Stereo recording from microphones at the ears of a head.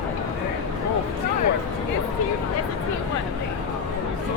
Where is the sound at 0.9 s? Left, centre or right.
Left.